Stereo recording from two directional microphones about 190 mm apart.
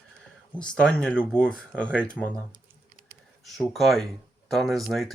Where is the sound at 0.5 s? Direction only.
5° left (ahead or behind).